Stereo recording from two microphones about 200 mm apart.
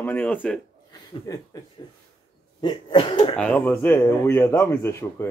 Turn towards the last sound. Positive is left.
turn(degrees=10)  # may be behind; listen again after turning